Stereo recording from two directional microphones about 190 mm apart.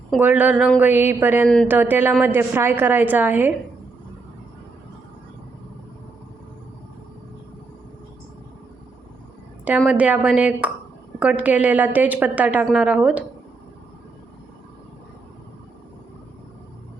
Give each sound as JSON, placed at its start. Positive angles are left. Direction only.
{"t": 0.2, "sound": "a woman's voice", "side_deg": -10}
{"t": 9.6, "sound": "a woman's voice", "side_deg": -5}